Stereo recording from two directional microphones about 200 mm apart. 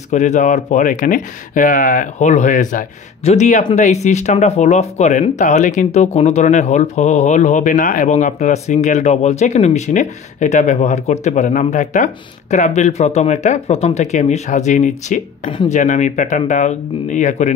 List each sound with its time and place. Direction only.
0.1 s speech: 35° left (ahead or behind)